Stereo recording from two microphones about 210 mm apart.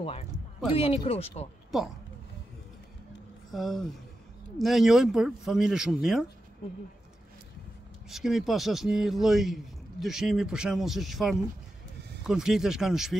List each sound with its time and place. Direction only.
0.0 s speech: 30° left (ahead or behind)
3.5 s a man's voice: centre (ahead or behind)
8.1 s a man's voice: centre (ahead or behind)